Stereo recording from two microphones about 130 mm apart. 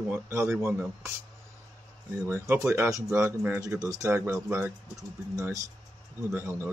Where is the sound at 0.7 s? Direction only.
10° right (ahead or behind).